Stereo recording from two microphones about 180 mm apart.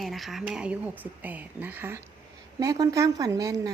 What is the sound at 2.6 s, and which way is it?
A woman's voice, 20° right (ahead or behind).